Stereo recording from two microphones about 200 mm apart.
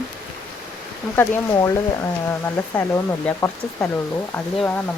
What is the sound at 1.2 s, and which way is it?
Speech, 15° left (ahead or behind).